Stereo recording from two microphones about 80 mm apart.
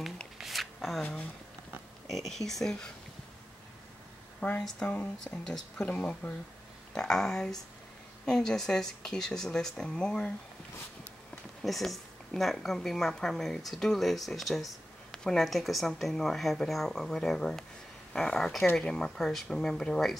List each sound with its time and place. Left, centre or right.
0.4 s a sound: centre
2.0 s speech: centre
4.6 s speech: centre
4.8 s speech: left
6.9 s speech: centre
11.6 s speech: centre